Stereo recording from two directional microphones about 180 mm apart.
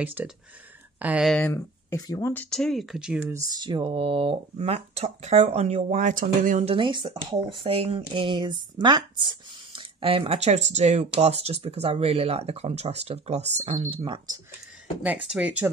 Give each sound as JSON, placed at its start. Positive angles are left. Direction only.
{"t": 0.0, "sound": "speech", "side_deg": -10}
{"t": 1.3, "sound": "speech", "side_deg": 15}
{"t": 2.3, "sound": "speech", "side_deg": 5}
{"t": 3.4, "sound": "speech", "side_deg": -25}
{"t": 6.7, "sound": "speech", "side_deg": -25}
{"t": 15.2, "sound": "speech", "side_deg": -5}